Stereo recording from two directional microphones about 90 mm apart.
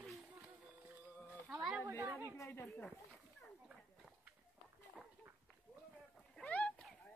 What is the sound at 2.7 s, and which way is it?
Speech, 10° left (ahead or behind).